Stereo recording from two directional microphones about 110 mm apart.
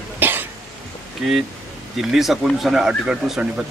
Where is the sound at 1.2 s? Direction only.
5° right (ahead or behind).